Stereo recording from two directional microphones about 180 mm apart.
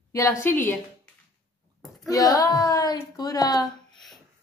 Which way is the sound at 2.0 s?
20° left (ahead or behind).